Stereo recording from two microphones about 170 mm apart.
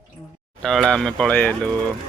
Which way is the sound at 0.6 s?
Centre (ahead or behind).